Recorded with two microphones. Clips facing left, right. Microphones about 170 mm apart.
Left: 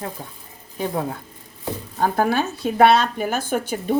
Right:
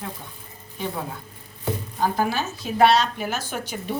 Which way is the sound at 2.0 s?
55° left (ahead or behind).